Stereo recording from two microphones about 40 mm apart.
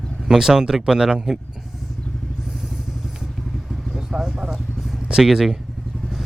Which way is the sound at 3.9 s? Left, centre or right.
Centre.